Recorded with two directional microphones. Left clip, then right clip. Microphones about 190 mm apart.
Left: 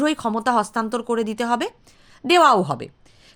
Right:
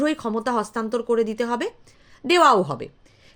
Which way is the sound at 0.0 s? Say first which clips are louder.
Left 2 dB; 20° left (ahead or behind).